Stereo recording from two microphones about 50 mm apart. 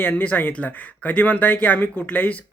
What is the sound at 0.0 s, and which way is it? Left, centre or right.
Speech, left.